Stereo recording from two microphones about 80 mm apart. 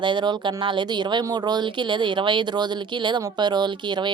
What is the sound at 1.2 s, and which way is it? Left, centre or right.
Speech, right.